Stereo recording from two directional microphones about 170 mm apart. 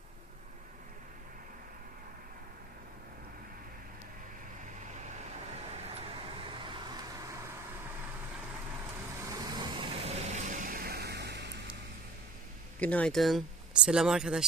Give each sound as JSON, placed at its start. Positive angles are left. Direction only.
{"t": 5.7, "sound": "vehicle", "side_deg": -35}
{"t": 9.3, "sound": "vehicle", "side_deg": -25}
{"t": 12.8, "sound": "speech", "side_deg": 10}